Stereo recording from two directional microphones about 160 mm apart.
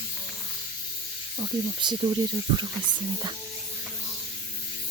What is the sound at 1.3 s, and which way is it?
Speech, 25° right (ahead or behind).